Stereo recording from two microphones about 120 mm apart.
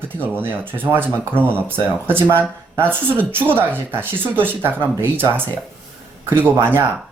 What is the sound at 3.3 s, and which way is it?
Speech, 15° right (ahead or behind).